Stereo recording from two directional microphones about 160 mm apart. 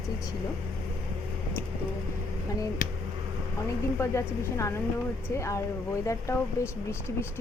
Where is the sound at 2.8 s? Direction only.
55° left (ahead or behind).